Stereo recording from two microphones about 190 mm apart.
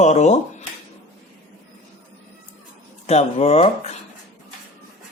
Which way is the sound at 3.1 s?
35° left (ahead or behind).